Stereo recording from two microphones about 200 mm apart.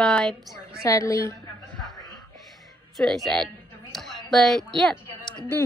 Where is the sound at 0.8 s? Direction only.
15° left (ahead or behind).